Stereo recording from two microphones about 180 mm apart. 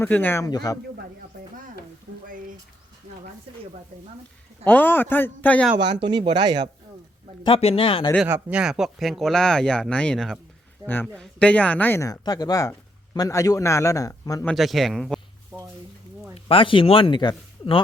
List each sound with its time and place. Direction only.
0.0 s speech: 10° left (ahead or behind)
4.6 s speech: 10° left (ahead or behind)
5.8 s speech: 25° right (ahead or behind)
7.4 s speech: 30° left (ahead or behind)
8.3 s speech: 5° right (ahead or behind); by 14.4 s 20° left (ahead or behind)
14.4 s speech: centre (ahead or behind)
15.5 s a sound: 15° right (ahead or behind)
16.3 s speech: 30° left (ahead or behind)